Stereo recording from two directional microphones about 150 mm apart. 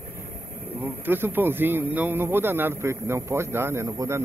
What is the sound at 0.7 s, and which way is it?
Speech, 15° right (ahead or behind).